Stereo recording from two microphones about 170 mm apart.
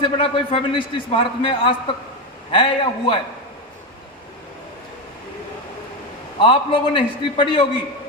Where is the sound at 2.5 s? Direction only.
30° left (ahead or behind).